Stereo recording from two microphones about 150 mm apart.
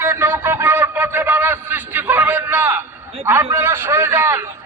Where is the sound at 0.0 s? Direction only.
15° right (ahead or behind).